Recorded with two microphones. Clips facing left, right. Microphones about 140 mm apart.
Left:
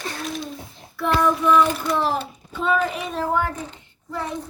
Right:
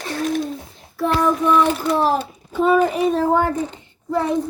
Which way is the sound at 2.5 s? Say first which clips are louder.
Right 6 dB; 40° right (ahead or behind).